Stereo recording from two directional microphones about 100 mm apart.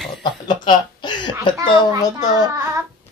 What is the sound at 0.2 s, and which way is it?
Chuckle, 50° left (ahead or behind).